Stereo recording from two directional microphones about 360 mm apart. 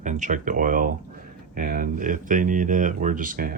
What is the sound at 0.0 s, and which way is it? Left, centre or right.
Speech, right.